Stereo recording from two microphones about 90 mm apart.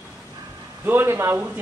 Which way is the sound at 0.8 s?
25° right (ahead or behind).